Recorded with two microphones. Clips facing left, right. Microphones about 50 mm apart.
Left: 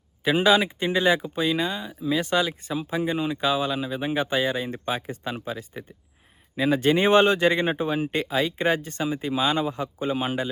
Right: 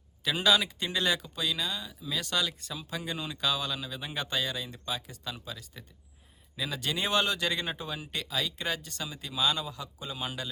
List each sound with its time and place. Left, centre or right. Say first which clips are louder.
0.3 s speech: left 7 dB; left